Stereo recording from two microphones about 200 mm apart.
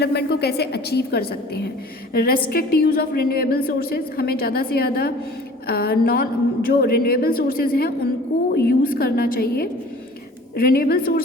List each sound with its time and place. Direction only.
0.0 s a woman's voice: 55° left (ahead or behind)